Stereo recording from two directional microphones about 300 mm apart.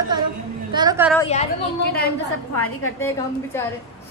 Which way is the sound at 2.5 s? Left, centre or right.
Left.